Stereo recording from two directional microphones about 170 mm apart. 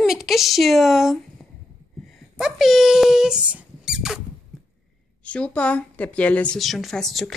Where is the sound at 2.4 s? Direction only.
Centre (ahead or behind).